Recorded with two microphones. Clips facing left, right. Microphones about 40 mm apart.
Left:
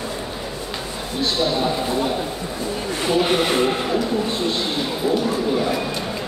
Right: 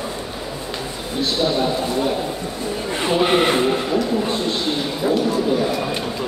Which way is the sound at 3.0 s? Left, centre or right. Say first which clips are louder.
Right 2 dB; right.